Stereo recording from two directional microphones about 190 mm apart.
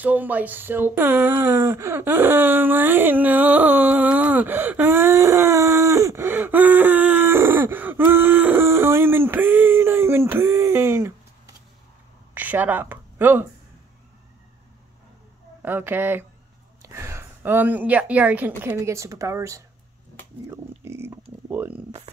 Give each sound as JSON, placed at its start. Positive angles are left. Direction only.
{"t": 0.0, "sound": "a sound", "side_deg": -10}
{"t": 15.6, "sound": "speech", "side_deg": -10}
{"t": 20.8, "sound": "speech", "side_deg": -15}